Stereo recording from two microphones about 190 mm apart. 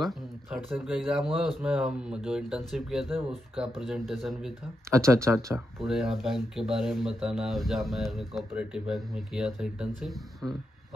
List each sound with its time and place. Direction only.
0.0 s speech: centre (ahead or behind)
4.8 s speech: 15° right (ahead or behind)
5.9 s speech: centre (ahead or behind)